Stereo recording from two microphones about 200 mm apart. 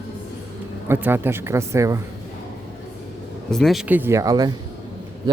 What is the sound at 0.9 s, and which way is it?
Speech, 10° right (ahead or behind).